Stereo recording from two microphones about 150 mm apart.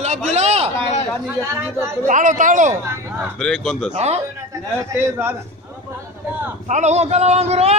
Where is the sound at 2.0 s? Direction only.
60° right (ahead or behind).